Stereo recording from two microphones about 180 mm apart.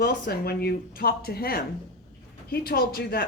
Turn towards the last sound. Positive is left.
turn(degrees=55)  # may be behind; listen again after turning